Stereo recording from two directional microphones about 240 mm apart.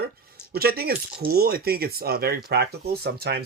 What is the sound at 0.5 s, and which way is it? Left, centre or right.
Speech, right.